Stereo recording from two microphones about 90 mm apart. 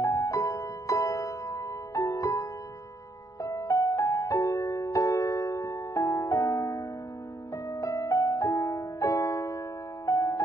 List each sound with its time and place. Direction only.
0.0 s music: 40° left (ahead or behind)
3.4 s music: 40° left (ahead or behind)